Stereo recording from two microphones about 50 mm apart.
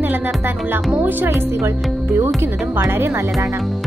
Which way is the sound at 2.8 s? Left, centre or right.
Right.